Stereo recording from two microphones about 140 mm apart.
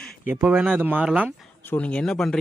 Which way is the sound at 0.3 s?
10° right (ahead or behind).